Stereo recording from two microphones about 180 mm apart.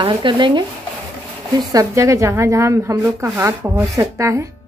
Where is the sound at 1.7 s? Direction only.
20° right (ahead or behind).